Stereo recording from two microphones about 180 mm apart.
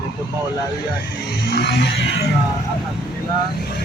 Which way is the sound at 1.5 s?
65° left (ahead or behind).